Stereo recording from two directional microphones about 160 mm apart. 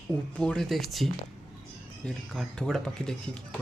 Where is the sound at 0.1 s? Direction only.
5° left (ahead or behind).